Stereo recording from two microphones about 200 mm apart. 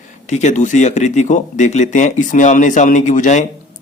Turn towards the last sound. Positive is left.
turn(degrees=35)  # may be behind; listen again after turning